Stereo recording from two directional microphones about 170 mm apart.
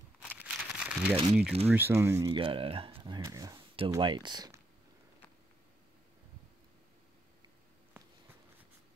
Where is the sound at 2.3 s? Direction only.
30° right (ahead or behind).